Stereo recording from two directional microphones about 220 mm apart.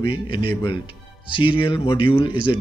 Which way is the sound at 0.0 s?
25° left (ahead or behind).